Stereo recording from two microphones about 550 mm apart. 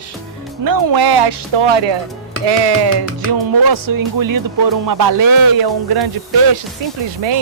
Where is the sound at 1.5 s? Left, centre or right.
Right.